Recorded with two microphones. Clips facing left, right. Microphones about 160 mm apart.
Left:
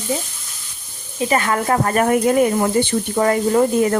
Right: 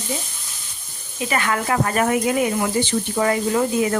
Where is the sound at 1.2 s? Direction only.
35° left (ahead or behind).